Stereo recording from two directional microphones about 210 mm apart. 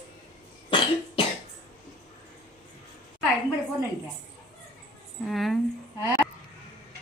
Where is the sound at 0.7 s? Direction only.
25° left (ahead or behind).